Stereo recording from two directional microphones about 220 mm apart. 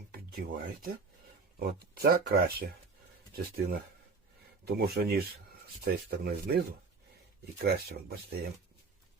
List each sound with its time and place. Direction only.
0.1 s speech: 40° right (ahead or behind)